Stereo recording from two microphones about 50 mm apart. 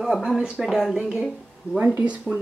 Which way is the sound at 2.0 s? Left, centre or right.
Right.